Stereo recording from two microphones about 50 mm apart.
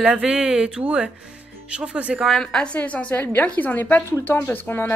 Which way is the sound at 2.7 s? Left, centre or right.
Left.